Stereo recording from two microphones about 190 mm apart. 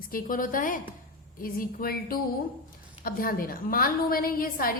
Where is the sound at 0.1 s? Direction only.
45° left (ahead or behind).